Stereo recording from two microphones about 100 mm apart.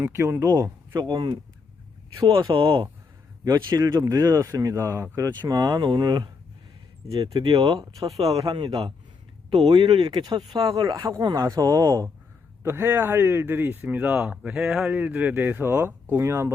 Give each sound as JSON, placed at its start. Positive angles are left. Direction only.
{"t": 0.0, "sound": "speech", "side_deg": -25}
{"t": 0.4, "sound": "speech", "side_deg": -40}
{"t": 2.5, "sound": "a man's voice", "side_deg": -60}
{"t": 3.4, "sound": "speech", "side_deg": -40}
{"t": 7.2, "sound": "speech", "side_deg": -70}
{"t": 7.6, "sound": "speech", "side_deg": -40}
{"t": 8.4, "sound": "a man's voice", "side_deg": -50}
{"t": 9.6, "sound": "speech", "side_deg": -50}
{"t": 12.6, "sound": "speech", "side_deg": -20}
{"t": 14.8, "sound": "speech", "side_deg": -15}